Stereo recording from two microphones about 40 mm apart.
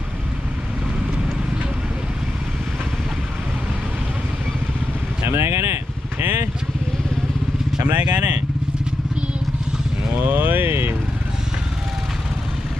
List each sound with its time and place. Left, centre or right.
5.2 s vehicle: right
7.9 s speech: right
10.2 s vehicle: right